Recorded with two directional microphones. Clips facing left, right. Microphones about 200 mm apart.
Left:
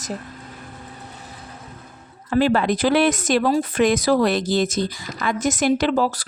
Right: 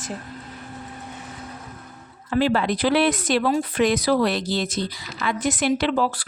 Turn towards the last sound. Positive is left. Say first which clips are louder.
# left 2 dB
turn(degrees=40)  # may be behind; listen again after turning